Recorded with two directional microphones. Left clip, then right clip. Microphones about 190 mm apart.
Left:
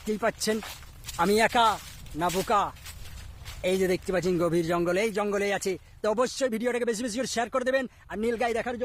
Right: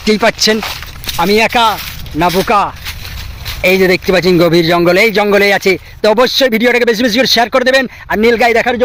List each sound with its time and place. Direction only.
0.0 s speech: 5° right (ahead or behind); by 1.8 s 10° left (ahead or behind)
2.3 s speech: 20° right (ahead or behind)
3.6 s speech: 5° right (ahead or behind)